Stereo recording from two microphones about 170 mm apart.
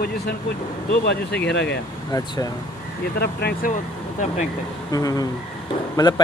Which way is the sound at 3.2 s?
70° left (ahead or behind).